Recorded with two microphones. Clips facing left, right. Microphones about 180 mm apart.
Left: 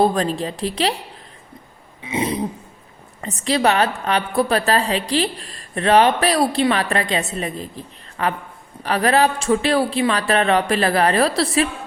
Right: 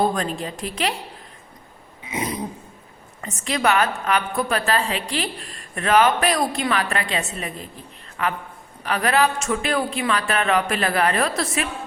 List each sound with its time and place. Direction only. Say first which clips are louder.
0.0 s a woman's voice: left 4 dB; 35° left (ahead or behind)
2.0 s burping: left 5 dB; 30° left (ahead or behind)
3.2 s a woman's voice: left 4 dB; 35° left (ahead or behind)